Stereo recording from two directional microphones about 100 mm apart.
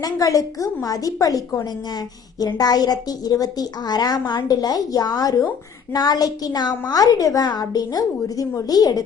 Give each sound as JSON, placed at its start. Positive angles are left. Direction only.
{"t": 0.0, "sound": "a woman's voice", "side_deg": 35}